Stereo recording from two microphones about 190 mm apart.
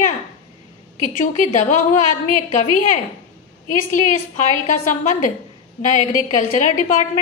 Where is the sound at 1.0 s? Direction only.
40° left (ahead or behind).